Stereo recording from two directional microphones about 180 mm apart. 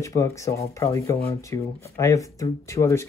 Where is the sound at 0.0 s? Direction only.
15° left (ahead or behind).